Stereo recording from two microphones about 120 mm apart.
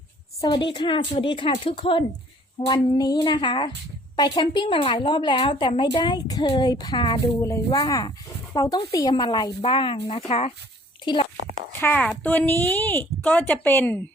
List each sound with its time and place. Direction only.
0.4 s a woman's voice: 35° left (ahead or behind)
2.6 s a woman's voice: 35° left (ahead or behind)
7.4 s a woman's voice: 25° left (ahead or behind); by 10.5 s 60° left (ahead or behind)
11.0 s a child's voice: 40° left (ahead or behind)
11.8 s speech: 15° left (ahead or behind)